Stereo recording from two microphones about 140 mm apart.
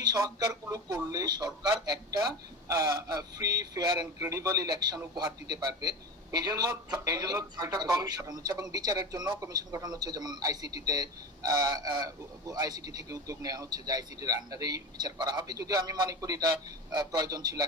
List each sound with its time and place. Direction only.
0.0 s a man's voice: 25° right (ahead or behind)